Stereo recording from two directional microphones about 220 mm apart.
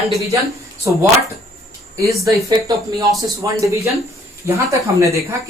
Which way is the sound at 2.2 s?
20° right (ahead or behind).